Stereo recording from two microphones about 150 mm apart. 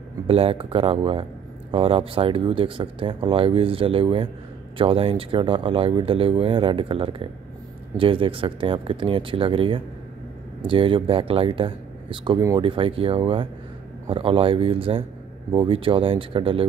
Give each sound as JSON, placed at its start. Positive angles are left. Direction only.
{"t": 0.3, "sound": "speech", "side_deg": -40}